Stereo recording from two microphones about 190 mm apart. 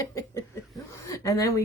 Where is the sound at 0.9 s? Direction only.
15° left (ahead or behind).